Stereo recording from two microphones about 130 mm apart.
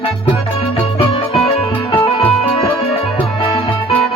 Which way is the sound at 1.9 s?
40° left (ahead or behind).